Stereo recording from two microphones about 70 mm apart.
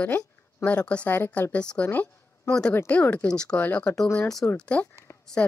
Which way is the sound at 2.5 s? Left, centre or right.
Centre.